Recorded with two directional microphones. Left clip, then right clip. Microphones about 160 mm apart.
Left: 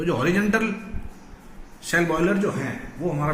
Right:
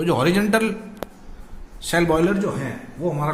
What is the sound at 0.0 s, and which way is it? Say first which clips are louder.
Speech: right 3 dB; 90° right.